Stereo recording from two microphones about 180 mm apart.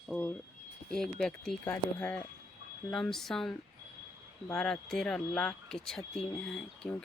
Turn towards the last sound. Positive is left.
turn(degrees=5)  # may be behind; listen again after turning